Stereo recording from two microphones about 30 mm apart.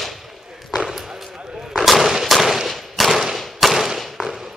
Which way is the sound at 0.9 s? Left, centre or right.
Centre.